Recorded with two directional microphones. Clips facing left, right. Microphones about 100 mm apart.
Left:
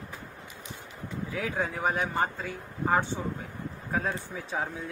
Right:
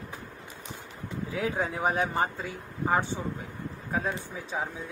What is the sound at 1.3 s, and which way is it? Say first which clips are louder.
Speech: right 2 dB; 20° right (ahead or behind).